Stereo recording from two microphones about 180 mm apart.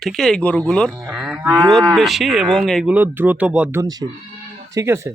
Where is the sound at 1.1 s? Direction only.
Centre (ahead or behind).